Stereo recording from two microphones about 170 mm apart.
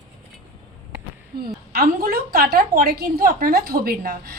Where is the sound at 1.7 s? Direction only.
60° right (ahead or behind).